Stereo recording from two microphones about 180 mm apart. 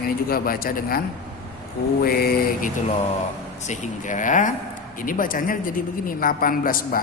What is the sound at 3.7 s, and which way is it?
A man's voice, 40° left (ahead or behind).